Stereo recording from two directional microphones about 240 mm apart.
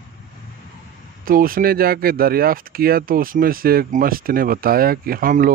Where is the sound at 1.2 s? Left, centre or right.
Right.